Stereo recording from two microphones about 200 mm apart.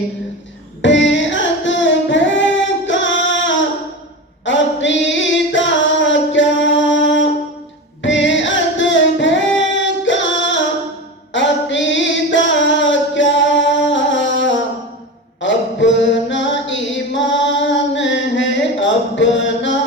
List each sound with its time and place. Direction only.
0.8 s carnatic music: 65° left (ahead or behind)
4.4 s singing: 65° left (ahead or behind)
8.0 s music: 65° left (ahead or behind)
9.8 s singing: 65° left (ahead or behind)
11.3 s a sound: 65° left (ahead or behind)
15.4 s chant: 65° left (ahead or behind)